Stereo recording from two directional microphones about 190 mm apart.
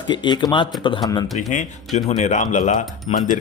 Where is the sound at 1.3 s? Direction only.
40° left (ahead or behind).